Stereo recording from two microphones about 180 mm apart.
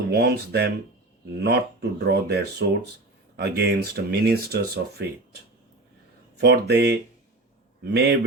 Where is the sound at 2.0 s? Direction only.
65° right (ahead or behind).